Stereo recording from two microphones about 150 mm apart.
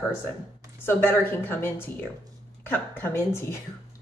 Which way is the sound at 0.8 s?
15° left (ahead or behind).